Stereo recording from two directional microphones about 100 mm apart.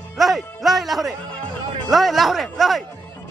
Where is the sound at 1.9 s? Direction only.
Centre (ahead or behind).